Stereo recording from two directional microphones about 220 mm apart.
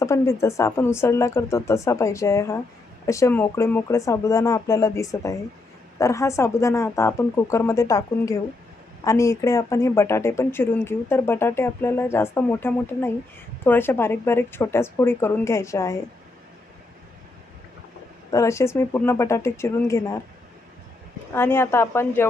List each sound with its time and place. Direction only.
0.0 s speech: 15° left (ahead or behind)
18.3 s speech: 15° left (ahead or behind)
21.3 s speech: 10° left (ahead or behind)